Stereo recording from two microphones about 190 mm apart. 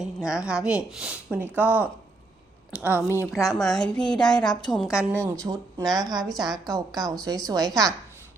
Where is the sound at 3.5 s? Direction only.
Centre (ahead or behind).